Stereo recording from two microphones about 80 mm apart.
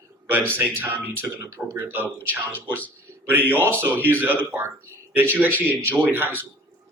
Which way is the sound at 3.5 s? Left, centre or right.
Right.